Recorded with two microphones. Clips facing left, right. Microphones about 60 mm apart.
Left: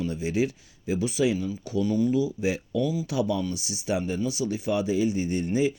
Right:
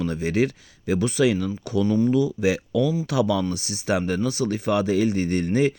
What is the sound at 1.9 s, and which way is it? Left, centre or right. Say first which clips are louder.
Speech: right 4 dB; right.